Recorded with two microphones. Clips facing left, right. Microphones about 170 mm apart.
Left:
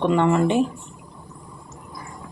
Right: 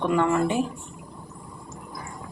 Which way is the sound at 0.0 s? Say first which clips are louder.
Left 3 dB; 20° left (ahead or behind).